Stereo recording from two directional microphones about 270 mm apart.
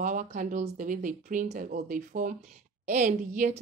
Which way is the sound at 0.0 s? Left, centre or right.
Right.